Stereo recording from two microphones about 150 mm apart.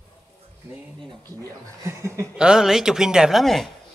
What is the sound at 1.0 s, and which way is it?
Speech, 25° right (ahead or behind).